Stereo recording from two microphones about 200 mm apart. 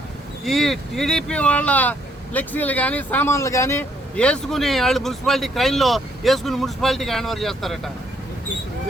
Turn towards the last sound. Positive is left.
turn(degrees=0)  # may be behind; listen again after turning